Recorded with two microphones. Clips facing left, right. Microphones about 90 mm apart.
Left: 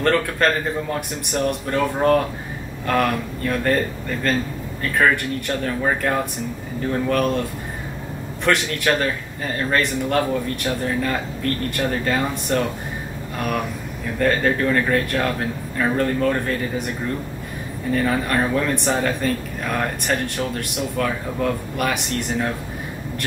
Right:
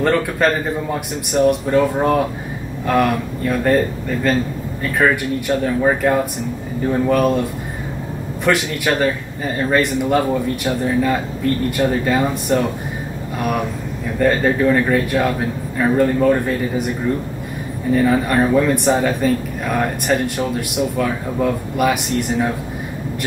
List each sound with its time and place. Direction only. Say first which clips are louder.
0.0 s speech: right 2 dB; 10° right (ahead or behind)
8.5 s a man's voice: right 2 dB; 5° right (ahead or behind)
14.1 s speech: right 3 dB; 5° right (ahead or behind)
17.9 s speech: right 5 dB; 5° right (ahead or behind)